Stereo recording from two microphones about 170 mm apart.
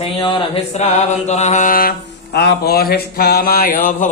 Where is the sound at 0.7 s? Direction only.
40° left (ahead or behind).